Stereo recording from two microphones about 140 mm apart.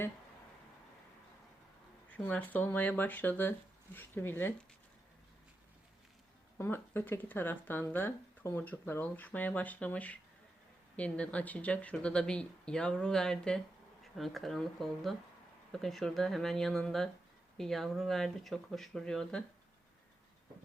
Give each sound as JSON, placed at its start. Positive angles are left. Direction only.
{"t": 2.1, "sound": "speech", "side_deg": 10}
{"t": 6.6, "sound": "speech", "side_deg": 15}